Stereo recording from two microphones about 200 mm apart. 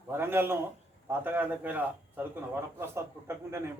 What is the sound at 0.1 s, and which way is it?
A man's voice, 10° right (ahead or behind).